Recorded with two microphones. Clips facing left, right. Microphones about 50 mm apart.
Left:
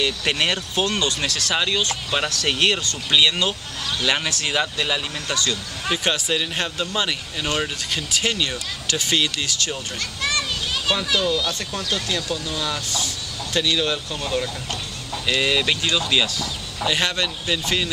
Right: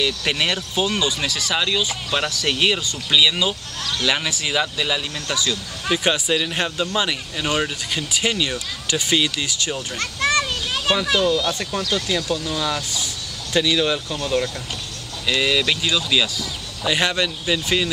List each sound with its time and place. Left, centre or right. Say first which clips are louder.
0.0 s speech: even; centre
1.5 s speech: even; centre
9.9 s children playing: right 6 dB; right
11.1 s speech: right 3 dB; centre
11.9 s speech: right 2 dB; centre
15.2 s speech: right 1 dB; centre